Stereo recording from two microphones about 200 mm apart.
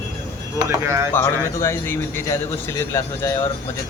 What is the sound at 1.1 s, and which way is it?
Speech, 15° left (ahead or behind).